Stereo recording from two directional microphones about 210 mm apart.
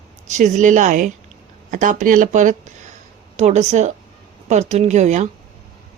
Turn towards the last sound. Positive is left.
turn(degrees=-35)  # may be behind; listen again after turning